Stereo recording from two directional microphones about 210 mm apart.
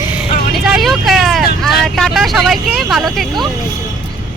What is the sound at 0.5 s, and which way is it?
Speech, centre (ahead or behind).